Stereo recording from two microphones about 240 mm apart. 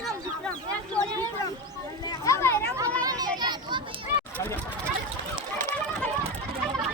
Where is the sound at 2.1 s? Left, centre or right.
Centre.